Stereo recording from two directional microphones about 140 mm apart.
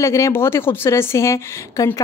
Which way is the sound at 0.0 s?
20° left (ahead or behind).